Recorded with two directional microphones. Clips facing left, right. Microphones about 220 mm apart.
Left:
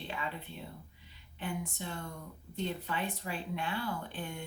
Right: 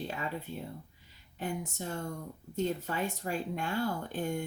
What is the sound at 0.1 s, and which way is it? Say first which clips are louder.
Speech: right 3 dB; 45° right (ahead or behind).